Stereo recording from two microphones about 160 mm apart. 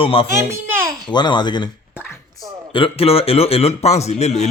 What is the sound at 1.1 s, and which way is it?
Speech, 30° left (ahead or behind).